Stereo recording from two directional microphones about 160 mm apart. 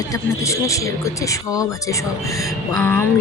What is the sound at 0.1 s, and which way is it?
Speech, 20° left (ahead or behind).